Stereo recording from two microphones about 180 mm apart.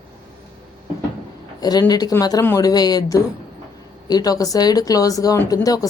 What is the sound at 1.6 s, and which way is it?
Speech, 20° left (ahead or behind).